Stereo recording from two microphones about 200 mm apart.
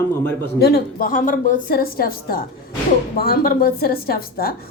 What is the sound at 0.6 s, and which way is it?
A woman's voice, 50° left (ahead or behind).